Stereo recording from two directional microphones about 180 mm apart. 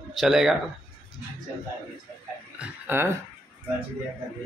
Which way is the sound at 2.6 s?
10° right (ahead or behind).